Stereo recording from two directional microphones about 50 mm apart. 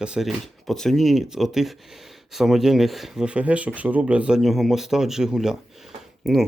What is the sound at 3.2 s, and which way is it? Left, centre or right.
Speech, right.